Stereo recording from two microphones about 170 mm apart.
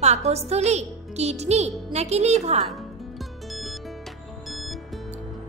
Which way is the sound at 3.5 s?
Centre (ahead or behind).